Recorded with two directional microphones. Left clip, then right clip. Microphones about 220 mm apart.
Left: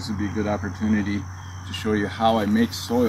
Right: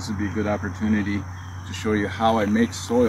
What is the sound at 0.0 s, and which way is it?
Speech, centre (ahead or behind).